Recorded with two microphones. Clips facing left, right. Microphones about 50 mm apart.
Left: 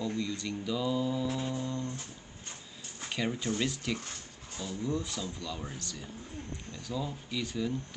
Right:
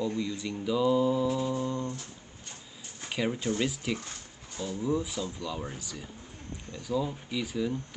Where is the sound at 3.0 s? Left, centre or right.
Centre.